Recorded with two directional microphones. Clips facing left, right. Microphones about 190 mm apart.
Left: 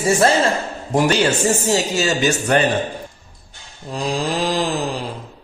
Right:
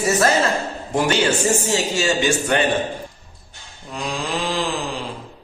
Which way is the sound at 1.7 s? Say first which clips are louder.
Left 2 dB; 40° left (ahead or behind).